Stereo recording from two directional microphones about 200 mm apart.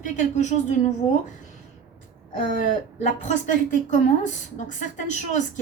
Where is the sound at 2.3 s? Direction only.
40° left (ahead or behind).